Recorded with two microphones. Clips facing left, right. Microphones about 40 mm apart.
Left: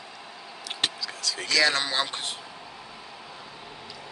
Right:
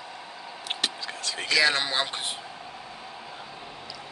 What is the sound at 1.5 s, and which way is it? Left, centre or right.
Speech, centre.